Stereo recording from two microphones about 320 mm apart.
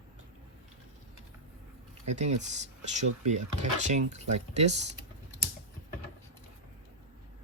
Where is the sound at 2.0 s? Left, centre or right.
Right.